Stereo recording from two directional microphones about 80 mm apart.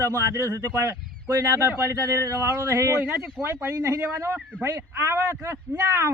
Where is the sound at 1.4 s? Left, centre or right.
Right.